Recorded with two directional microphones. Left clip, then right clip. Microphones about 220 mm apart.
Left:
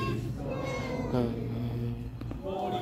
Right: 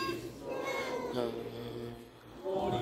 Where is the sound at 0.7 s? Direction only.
Centre (ahead or behind).